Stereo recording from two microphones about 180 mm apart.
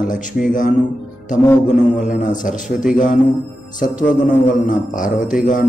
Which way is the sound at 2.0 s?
45° left (ahead or behind).